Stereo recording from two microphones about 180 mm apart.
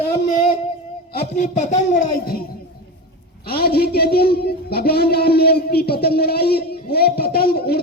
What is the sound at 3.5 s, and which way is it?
Speech, 60° left (ahead or behind).